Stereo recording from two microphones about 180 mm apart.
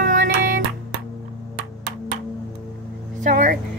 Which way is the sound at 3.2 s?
45° right (ahead or behind).